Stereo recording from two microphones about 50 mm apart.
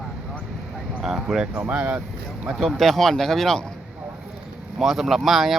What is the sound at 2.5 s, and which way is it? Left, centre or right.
Speech, centre.